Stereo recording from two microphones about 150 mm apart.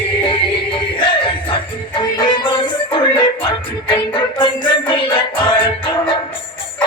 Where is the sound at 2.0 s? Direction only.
30° left (ahead or behind).